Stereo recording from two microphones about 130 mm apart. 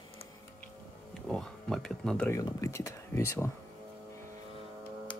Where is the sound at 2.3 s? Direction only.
25° left (ahead or behind).